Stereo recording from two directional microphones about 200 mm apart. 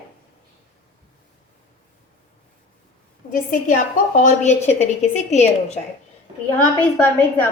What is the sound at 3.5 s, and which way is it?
A woman's voice, 40° left (ahead or behind).